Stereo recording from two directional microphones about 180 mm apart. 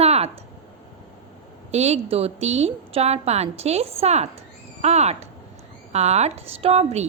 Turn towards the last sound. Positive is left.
turn(degrees=-35)  # may be behind; listen again after turning